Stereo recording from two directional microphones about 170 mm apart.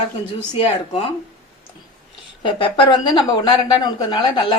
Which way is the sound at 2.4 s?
30° left (ahead or behind).